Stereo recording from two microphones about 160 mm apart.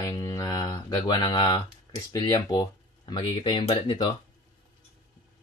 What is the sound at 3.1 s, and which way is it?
Speech, 30° left (ahead or behind).